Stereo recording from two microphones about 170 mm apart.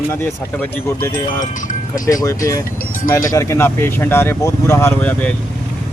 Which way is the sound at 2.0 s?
20° left (ahead or behind).